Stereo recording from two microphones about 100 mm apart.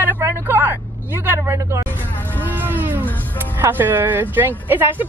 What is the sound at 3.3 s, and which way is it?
Speech, 20° right (ahead or behind).